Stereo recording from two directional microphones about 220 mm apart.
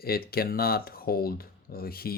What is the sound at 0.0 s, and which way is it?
Speech, 45° left (ahead or behind).